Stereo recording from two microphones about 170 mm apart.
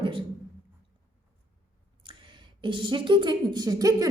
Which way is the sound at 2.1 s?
30° right (ahead or behind).